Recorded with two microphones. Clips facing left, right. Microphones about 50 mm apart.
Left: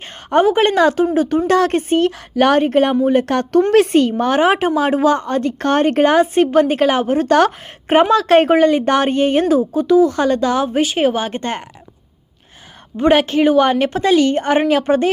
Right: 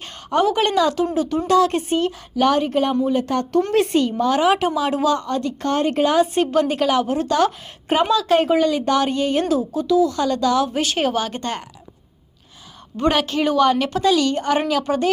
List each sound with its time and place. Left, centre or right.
0.3 s a woman's voice: left
3.2 s a woman's voice: left
10.8 s speech: centre
13.0 s a woman's voice: left